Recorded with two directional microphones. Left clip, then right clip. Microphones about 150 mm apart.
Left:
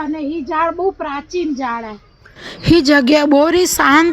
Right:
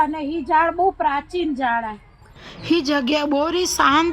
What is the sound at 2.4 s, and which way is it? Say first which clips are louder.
A woman's voice: left 8 dB; 35° left (ahead or behind).